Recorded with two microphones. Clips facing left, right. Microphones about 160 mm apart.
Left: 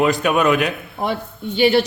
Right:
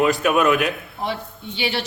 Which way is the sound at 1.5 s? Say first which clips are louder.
Left 11 dB; 50° left (ahead or behind).